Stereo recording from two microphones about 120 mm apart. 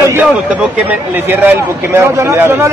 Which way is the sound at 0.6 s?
15° right (ahead or behind).